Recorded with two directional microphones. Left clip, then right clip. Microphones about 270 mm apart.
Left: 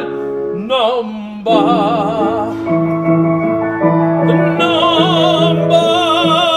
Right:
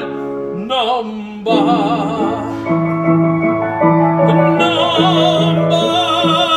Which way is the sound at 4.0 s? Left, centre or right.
Right.